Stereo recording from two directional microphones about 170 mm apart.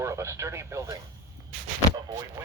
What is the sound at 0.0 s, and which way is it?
Speech, 15° right (ahead or behind).